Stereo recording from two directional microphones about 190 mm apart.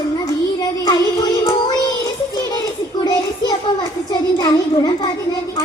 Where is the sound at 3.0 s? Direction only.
20° left (ahead or behind).